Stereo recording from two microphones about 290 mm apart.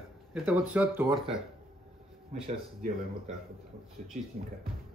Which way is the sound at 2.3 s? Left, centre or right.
Right.